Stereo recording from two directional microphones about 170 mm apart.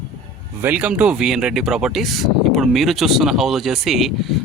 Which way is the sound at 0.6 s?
10° right (ahead or behind).